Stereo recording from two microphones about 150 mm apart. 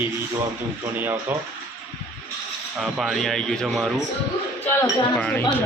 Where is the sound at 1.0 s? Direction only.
15° right (ahead or behind).